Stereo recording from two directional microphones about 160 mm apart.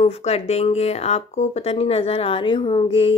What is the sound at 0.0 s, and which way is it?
Speech, 40° left (ahead or behind).